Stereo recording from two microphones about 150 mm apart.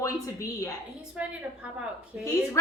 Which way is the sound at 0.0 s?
20° left (ahead or behind).